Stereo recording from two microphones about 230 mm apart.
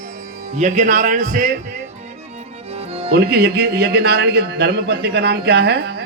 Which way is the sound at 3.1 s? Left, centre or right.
Right.